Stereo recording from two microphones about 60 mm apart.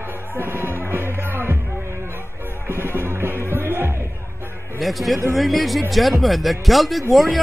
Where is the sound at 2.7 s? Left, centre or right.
Right.